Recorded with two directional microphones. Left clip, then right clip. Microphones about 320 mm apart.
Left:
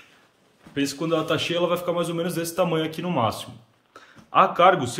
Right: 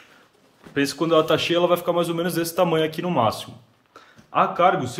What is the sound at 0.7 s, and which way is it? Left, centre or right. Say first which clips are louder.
A man's voice: right 5 dB; centre.